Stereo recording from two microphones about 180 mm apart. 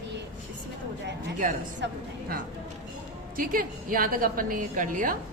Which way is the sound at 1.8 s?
75° right (ahead or behind).